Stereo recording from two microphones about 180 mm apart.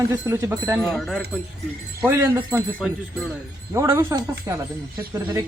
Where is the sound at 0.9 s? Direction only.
Centre (ahead or behind).